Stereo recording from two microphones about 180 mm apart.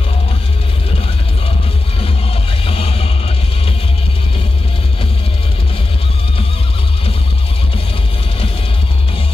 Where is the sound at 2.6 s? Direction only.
35° left (ahead or behind).